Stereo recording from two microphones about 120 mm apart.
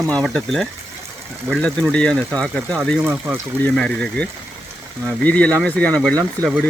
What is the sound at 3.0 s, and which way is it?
Speech, 15° right (ahead or behind).